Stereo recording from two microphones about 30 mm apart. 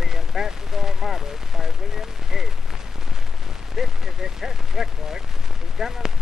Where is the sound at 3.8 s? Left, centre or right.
Centre.